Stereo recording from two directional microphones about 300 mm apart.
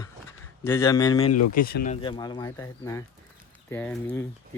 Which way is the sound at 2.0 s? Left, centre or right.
Centre.